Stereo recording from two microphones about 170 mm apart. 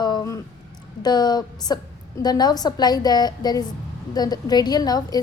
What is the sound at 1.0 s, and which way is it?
A woman's voice, 25° left (ahead or behind).